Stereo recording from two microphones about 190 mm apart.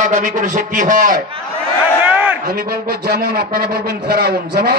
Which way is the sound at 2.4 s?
50° right (ahead or behind).